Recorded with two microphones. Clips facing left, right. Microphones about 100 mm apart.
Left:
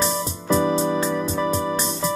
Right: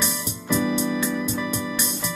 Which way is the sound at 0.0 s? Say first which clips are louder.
Left 5 dB; 35° left (ahead or behind).